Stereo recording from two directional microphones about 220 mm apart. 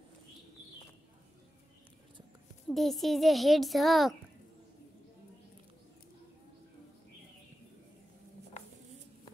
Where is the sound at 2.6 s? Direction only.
Centre (ahead or behind).